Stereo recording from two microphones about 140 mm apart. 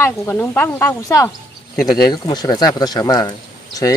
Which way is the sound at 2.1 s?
30° left (ahead or behind).